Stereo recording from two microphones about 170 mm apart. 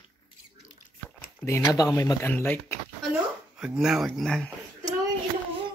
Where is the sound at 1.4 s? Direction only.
15° left (ahead or behind).